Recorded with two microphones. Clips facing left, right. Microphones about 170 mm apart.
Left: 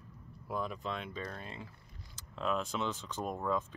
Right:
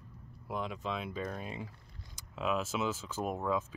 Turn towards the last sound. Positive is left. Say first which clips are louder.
# right 1 dB
turn(degrees=-5)  # may be behind; listen again after turning